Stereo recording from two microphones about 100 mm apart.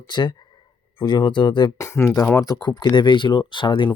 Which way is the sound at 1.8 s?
25° left (ahead or behind).